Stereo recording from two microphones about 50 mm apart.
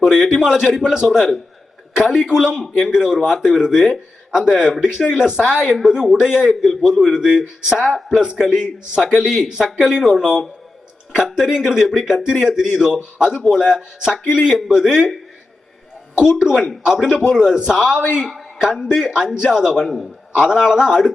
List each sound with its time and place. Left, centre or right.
0.0 s a man's voice: centre
16.4 s a man's voice: centre
18.2 s a man's voice: centre
18.6 s a man's voice: centre